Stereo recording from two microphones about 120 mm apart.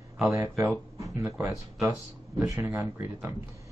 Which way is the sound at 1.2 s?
15° right (ahead or behind).